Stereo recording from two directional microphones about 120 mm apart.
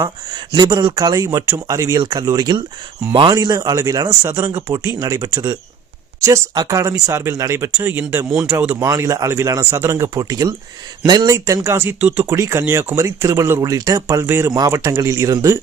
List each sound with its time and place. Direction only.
0.0 s speech: 35° right (ahead or behind)
4.3 s speech: 20° right (ahead or behind)
4.9 s speech: 30° right (ahead or behind); by 12.2 s 10° right (ahead or behind)
12.2 s speech: 25° right (ahead or behind)